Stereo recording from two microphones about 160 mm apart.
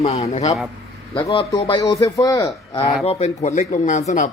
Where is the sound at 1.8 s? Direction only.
20° left (ahead or behind).